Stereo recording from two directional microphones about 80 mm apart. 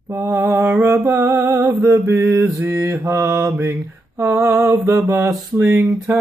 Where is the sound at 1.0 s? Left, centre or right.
Right.